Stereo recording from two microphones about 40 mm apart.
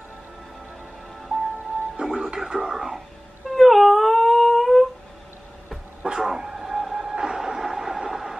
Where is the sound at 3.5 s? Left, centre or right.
Centre.